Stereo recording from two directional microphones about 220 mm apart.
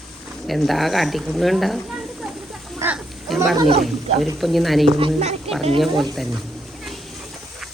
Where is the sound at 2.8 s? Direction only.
10° right (ahead or behind).